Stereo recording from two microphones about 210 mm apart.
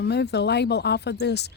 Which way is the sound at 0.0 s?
50° left (ahead or behind).